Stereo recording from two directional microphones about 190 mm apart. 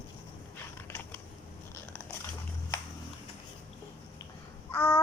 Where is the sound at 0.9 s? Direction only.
10° left (ahead or behind).